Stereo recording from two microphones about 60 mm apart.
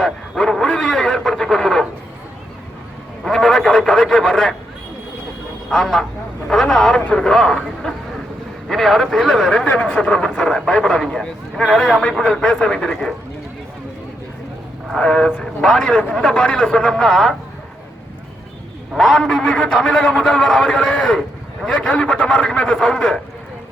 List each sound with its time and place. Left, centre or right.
0.0 s a sound: centre
3.2 s a sound: centre
5.6 s a man's voice: centre
9.6 s a man's voice: centre
14.9 s a man's voice: centre
16.0 s a man's voice: left
18.9 s a man's voice: centre